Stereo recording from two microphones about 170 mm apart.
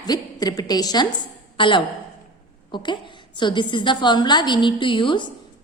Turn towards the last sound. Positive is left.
turn(degrees=30)  # may be behind; listen again after turning